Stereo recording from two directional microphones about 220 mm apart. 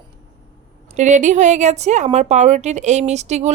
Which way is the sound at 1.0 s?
35° right (ahead or behind).